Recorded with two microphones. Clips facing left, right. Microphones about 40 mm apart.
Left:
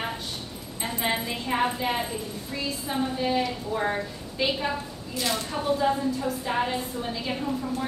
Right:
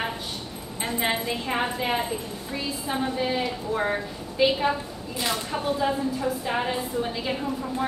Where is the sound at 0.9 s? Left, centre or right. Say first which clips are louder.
Right 2 dB; centre.